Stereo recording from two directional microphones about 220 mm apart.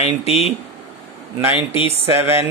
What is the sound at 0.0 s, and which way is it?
Speech, 30° left (ahead or behind).